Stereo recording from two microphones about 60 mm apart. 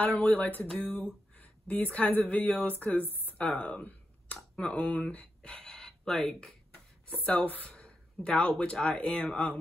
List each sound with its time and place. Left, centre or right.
0.0 s a sound: left
1.3 s speech: left
2.8 s speech: left
3.3 s speech: left
7.3 s a sound: left
7.7 s speech: centre